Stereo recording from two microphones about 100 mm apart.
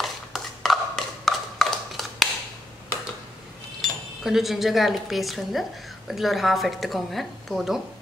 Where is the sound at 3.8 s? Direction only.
5° right (ahead or behind).